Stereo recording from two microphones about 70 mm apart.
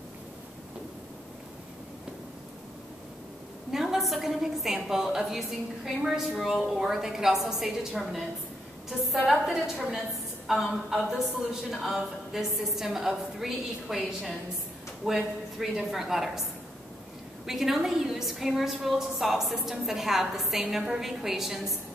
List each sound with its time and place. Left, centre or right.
3.7 s a woman's voice: centre
17.5 s a woman's voice: centre